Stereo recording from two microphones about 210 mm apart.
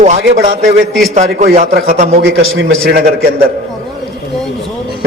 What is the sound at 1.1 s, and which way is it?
A man's voice, 35° right (ahead or behind).